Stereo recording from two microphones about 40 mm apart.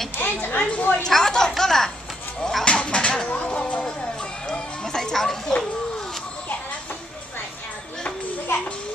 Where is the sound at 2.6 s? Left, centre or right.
Left.